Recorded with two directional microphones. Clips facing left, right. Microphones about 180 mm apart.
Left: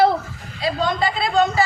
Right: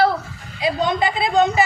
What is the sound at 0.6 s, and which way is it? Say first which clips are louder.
A man's voice: right 1 dB; 15° right (ahead or behind).